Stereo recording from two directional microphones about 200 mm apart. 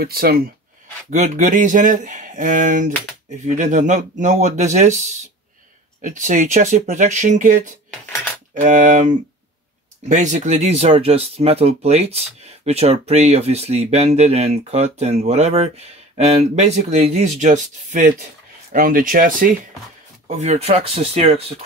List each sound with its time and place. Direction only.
0.0 s speech: 50° right (ahead or behind)
1.1 s speech: 40° right (ahead or behind)
20.2 s speech: 35° right (ahead or behind)